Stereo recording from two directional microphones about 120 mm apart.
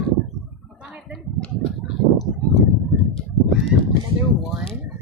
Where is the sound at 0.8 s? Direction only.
5° right (ahead or behind).